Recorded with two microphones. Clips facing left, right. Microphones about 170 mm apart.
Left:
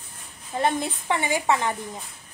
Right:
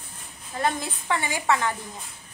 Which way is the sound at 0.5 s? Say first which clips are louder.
Left 3 dB; 20° left (ahead or behind).